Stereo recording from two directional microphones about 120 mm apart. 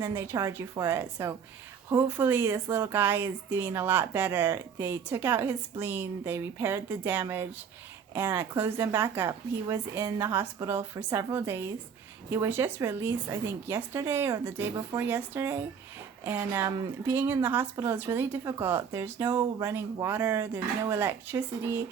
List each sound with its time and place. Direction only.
0.0 s a woman's voice: 25° right (ahead or behind)
19.2 s a woman's voice: 35° right (ahead or behind); by 21.8 s 20° right (ahead or behind)